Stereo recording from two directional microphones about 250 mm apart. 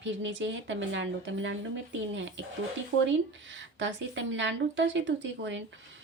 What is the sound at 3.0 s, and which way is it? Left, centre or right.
Speech, right.